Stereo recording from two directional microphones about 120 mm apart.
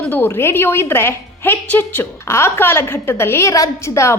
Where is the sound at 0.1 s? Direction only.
15° left (ahead or behind).